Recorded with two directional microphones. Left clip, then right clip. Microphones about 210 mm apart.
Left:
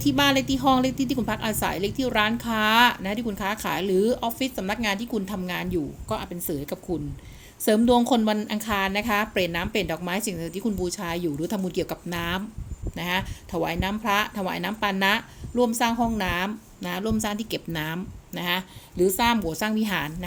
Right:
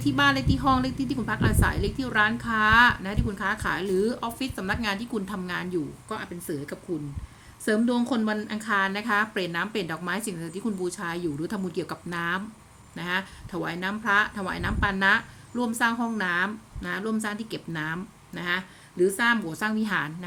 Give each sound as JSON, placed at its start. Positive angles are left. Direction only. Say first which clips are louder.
{"t": 0.0, "sound": "a woman's voice", "louder": "left 1 dB", "side_deg": 15}
{"t": 7.6, "sound": "a woman's voice", "louder": "left 6 dB", "side_deg": 20}